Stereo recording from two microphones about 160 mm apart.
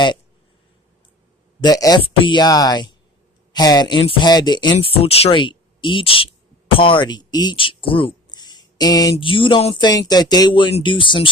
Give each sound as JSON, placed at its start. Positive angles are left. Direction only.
{"t": 1.6, "sound": "speech", "side_deg": 25}